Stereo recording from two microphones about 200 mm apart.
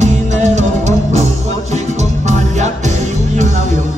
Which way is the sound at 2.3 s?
35° right (ahead or behind).